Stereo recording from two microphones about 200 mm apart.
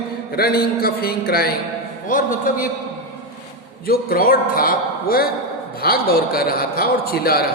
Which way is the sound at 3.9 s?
45° left (ahead or behind).